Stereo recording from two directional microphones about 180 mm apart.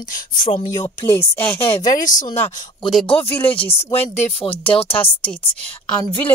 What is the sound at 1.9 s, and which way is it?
Speech, 45° left (ahead or behind).